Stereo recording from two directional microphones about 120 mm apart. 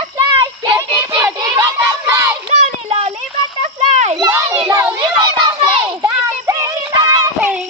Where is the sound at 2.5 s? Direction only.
60° right (ahead or behind).